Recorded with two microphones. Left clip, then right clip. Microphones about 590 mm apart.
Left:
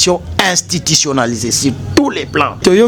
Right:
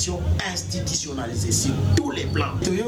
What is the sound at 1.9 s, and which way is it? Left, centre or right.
Speech, left.